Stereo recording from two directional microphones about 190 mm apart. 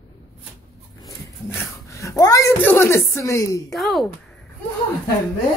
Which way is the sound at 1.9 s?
15° left (ahead or behind).